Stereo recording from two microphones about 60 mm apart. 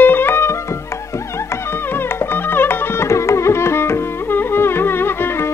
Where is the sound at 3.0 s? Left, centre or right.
Left.